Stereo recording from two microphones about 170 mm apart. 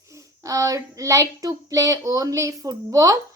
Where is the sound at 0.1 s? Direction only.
20° right (ahead or behind).